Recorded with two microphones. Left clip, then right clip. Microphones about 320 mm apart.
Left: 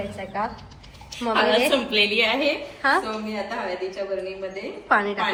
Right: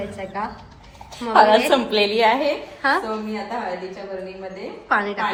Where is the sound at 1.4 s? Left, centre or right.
Right.